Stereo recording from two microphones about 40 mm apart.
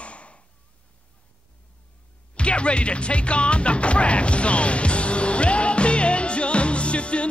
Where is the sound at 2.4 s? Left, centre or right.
Left.